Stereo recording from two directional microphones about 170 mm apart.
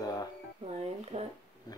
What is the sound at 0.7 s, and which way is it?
Speech, 35° right (ahead or behind).